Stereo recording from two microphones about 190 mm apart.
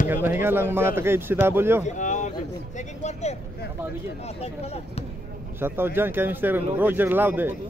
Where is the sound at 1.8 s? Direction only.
40° left (ahead or behind).